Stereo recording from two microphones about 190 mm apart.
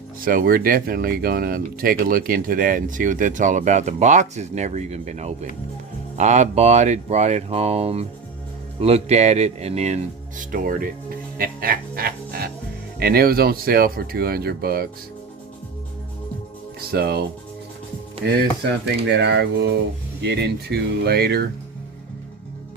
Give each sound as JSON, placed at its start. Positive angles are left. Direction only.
{"t": 0.2, "sound": "speech", "side_deg": -50}
{"t": 11.3, "sound": "music", "side_deg": -50}
{"t": 13.0, "sound": "speech", "side_deg": -55}
{"t": 16.9, "sound": "speech", "side_deg": -55}
{"t": 18.2, "sound": "speech", "side_deg": -55}